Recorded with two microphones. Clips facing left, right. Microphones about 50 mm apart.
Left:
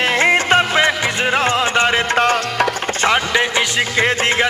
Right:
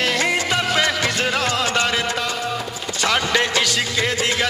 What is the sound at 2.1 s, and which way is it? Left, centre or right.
Music, left.